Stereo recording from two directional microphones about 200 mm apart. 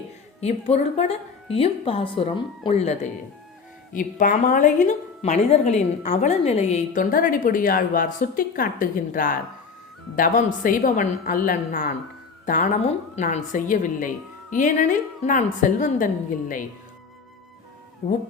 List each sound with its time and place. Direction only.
0.3 s a woman's voice: 30° left (ahead or behind)